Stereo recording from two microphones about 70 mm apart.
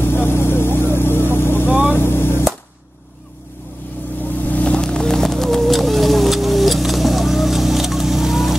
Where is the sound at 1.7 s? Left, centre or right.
Centre.